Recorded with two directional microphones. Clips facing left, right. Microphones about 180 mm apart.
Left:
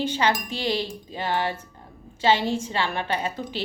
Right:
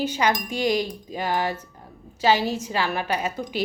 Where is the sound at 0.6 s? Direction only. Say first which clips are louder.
Right 7 dB; 30° left (ahead or behind).